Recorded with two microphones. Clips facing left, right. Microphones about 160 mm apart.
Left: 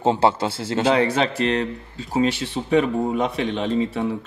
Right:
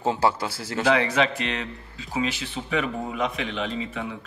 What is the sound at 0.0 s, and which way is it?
Speech, 25° left (ahead or behind).